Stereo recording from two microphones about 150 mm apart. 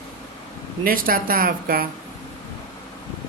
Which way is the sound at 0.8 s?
70° right (ahead or behind).